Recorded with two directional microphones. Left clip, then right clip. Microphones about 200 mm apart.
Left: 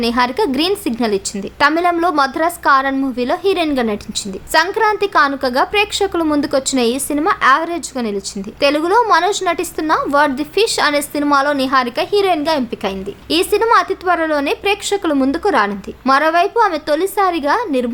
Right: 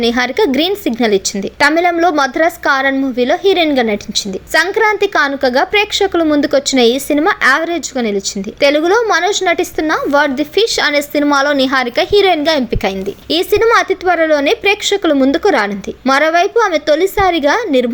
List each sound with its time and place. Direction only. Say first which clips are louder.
0.0 s a woman's voice: right 3 dB; 10° right (ahead or behind)